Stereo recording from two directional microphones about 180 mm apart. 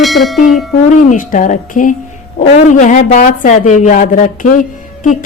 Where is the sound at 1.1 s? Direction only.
45° left (ahead or behind).